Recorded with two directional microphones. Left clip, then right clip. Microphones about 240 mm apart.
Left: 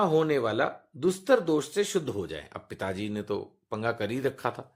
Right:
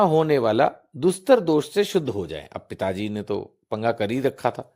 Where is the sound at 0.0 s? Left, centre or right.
Right.